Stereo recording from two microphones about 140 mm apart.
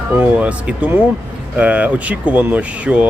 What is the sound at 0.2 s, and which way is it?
Speech, 10° right (ahead or behind).